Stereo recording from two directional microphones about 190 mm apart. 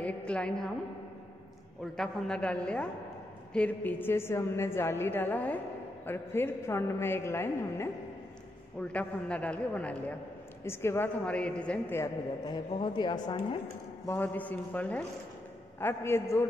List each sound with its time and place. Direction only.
0.0 s a woman's voice: 5° left (ahead or behind)
2.0 s a woman's voice: 5° left (ahead or behind)
12.4 s a woman's voice: 25° left (ahead or behind)
14.0 s a woman's voice: 10° left (ahead or behind)